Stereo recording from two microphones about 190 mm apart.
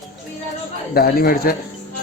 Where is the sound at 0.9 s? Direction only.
55° left (ahead or behind).